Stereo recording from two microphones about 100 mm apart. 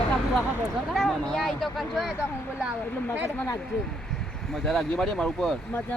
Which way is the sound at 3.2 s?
25° left (ahead or behind).